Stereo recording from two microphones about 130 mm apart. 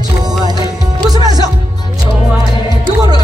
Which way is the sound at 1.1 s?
30° right (ahead or behind).